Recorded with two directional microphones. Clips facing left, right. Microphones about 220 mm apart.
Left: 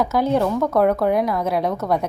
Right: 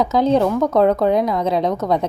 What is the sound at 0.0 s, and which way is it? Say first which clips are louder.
A woman's voice: right 3 dB; 20° right (ahead or behind).